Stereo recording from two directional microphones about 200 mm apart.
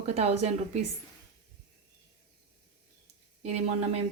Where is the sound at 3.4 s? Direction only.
35° right (ahead or behind).